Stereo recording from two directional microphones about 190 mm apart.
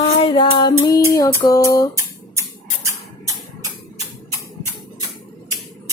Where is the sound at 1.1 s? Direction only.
20° left (ahead or behind).